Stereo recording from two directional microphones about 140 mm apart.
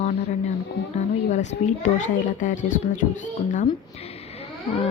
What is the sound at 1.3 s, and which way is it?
A child's voice, 55° left (ahead or behind).